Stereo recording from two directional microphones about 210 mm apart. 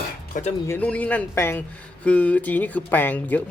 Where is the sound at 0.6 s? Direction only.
10° left (ahead or behind).